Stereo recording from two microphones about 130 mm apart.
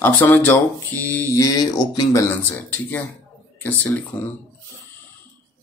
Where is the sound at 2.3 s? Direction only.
15° left (ahead or behind).